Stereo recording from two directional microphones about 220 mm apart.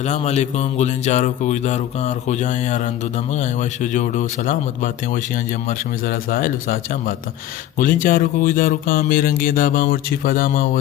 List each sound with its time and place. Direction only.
0.0 s speech: 30° left (ahead or behind)
7.8 s speech: 40° left (ahead or behind)